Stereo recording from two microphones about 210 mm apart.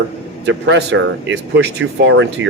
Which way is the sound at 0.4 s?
55° right (ahead or behind).